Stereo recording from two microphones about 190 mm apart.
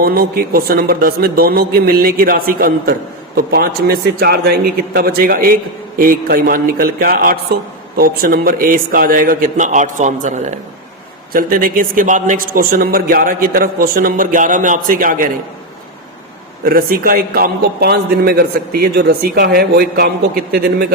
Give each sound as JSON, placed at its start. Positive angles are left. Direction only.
{"t": 0.0, "sound": "a man's voice", "side_deg": -50}
{"t": 16.6, "sound": "a man's voice", "side_deg": -50}